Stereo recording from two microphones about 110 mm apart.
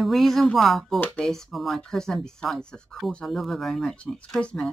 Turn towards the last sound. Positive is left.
turn(degrees=5)  # may be behind; listen again after turning